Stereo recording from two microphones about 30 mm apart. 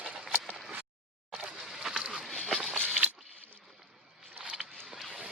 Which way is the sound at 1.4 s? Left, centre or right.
Centre.